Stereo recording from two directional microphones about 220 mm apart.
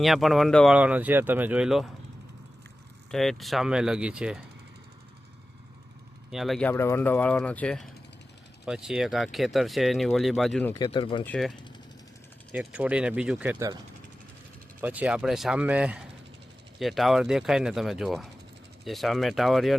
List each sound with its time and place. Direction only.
0.0 s speech: centre (ahead or behind)
3.1 s speech: centre (ahead or behind)
6.3 s speech: centre (ahead or behind)
10.8 s speech: 25° left (ahead or behind)
11.3 s speech: centre (ahead or behind)
14.8 s speech: 5° right (ahead or behind)